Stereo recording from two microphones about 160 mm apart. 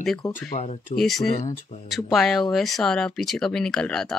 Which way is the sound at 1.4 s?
50° left (ahead or behind).